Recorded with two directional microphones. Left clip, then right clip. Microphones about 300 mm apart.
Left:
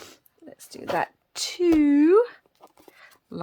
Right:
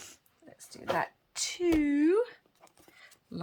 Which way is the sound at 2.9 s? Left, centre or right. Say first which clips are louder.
Left 6 dB; centre.